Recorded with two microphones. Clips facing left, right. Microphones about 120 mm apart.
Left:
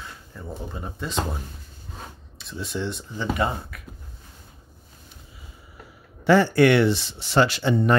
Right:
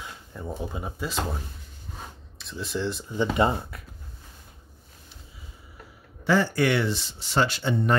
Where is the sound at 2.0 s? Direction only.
Centre (ahead or behind).